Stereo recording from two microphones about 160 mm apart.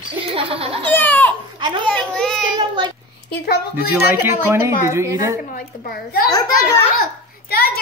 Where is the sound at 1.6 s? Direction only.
30° right (ahead or behind).